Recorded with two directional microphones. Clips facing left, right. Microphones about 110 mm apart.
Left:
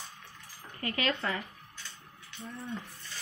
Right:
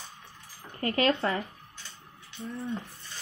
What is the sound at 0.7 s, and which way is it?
Speech, 35° right (ahead or behind).